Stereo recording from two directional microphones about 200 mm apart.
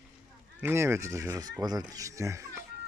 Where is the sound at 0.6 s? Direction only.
10° right (ahead or behind).